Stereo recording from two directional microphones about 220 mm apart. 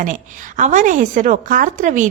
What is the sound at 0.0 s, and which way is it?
A woman's voice, 35° right (ahead or behind).